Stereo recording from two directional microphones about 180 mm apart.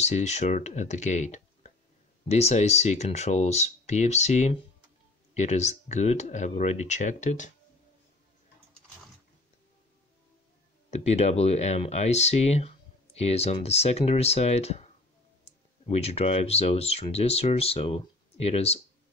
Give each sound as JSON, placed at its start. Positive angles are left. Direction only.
{"t": 0.0, "sound": "speech", "side_deg": 40}
{"t": 10.9, "sound": "speech", "side_deg": 35}